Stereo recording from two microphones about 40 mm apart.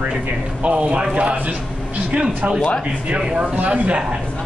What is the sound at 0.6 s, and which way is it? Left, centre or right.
Speech, right.